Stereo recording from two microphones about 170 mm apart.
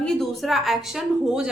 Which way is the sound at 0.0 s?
5° left (ahead or behind).